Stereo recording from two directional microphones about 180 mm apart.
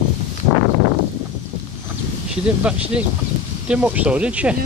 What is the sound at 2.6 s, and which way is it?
Speech, 5° right (ahead or behind).